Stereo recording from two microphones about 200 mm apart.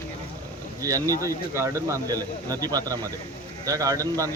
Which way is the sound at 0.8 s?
15° right (ahead or behind).